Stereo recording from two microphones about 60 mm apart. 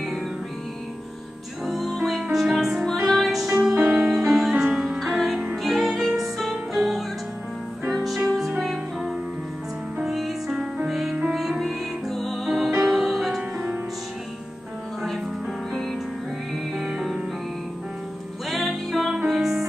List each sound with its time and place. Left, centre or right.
1.7 s music: centre
3.8 s music: centre
4.1 s music: centre
9.9 s music: centre
13.4 s music: right
15.7 s music: centre
17.0 s music: centre
18.5 s music: centre